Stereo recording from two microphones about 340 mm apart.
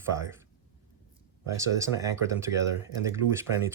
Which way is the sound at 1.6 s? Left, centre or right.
Centre.